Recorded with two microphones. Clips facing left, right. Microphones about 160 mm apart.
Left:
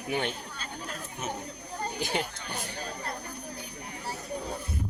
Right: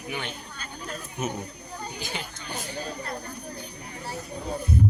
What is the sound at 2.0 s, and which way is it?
Speech, 60° left (ahead or behind).